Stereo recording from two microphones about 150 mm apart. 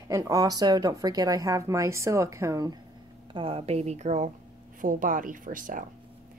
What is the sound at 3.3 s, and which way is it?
Speech, 40° right (ahead or behind).